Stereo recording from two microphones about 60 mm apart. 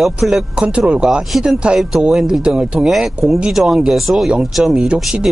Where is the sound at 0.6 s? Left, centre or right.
Centre.